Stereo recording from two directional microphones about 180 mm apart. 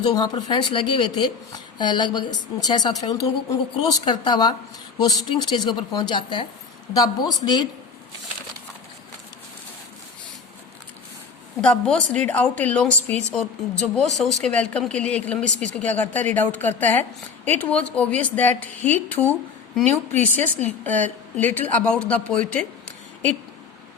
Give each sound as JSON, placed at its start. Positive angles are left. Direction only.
{"t": 0.0, "sound": "speech", "side_deg": 25}
{"t": 11.6, "sound": "speech", "side_deg": 5}